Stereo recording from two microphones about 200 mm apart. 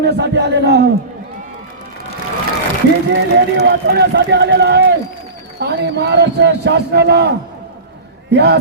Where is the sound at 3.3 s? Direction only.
55° right (ahead or behind).